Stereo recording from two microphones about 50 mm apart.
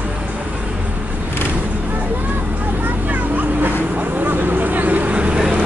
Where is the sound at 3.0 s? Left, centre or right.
Right.